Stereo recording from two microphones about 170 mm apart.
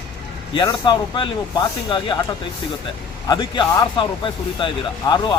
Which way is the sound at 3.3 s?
25° left (ahead or behind).